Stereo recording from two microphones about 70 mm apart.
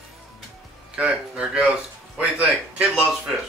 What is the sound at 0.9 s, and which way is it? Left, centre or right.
Speech, centre.